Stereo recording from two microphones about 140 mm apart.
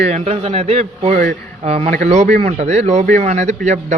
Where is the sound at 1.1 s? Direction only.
90° right.